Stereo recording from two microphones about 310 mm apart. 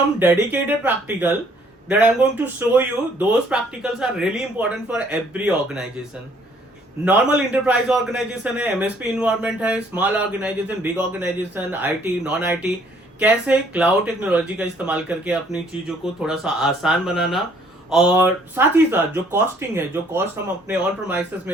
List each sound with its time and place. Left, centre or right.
0.2 s speech: centre
7.0 s speech: centre